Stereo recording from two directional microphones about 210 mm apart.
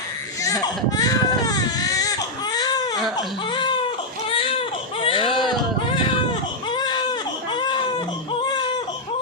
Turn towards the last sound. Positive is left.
turn(degrees=20)  # may be behind; listen again after turning